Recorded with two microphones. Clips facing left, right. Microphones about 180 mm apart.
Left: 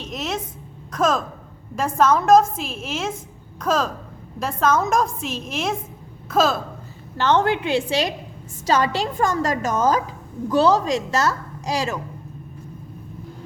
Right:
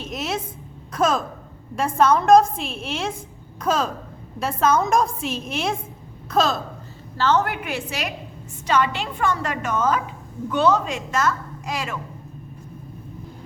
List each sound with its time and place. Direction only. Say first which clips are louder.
0.0 s a woman's voice: even; centre (ahead or behind)
7.2 s a woman's voice: left 2 dB; 25° left (ahead or behind)